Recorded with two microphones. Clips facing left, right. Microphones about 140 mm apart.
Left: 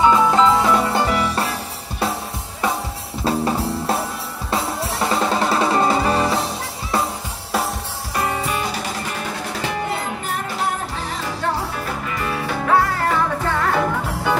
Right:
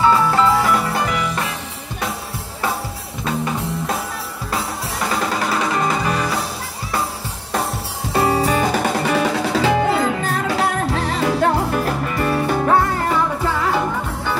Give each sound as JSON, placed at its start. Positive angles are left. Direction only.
{"t": 0.0, "sound": "music", "side_deg": 20}
{"t": 3.3, "sound": "music", "side_deg": 30}
{"t": 8.1, "sound": "music", "side_deg": -30}
{"t": 8.9, "sound": "music", "side_deg": -85}
{"t": 12.3, "sound": "music", "side_deg": -45}